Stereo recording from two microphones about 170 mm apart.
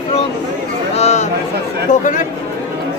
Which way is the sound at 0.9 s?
40° left (ahead or behind).